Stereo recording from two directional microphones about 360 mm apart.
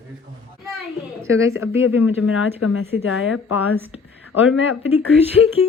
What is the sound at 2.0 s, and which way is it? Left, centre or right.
Speech, left.